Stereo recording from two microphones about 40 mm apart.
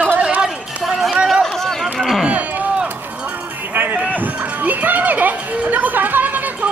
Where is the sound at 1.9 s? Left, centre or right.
Centre.